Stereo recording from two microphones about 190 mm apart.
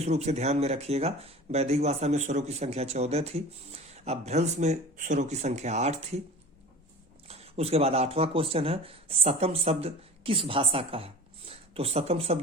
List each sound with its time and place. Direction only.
0.0 s speech: 35° right (ahead or behind)
7.3 s speech: 35° right (ahead or behind)